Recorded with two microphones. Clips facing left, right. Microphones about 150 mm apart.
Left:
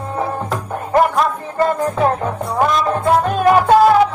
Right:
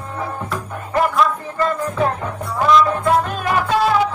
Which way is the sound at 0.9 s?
45° left (ahead or behind).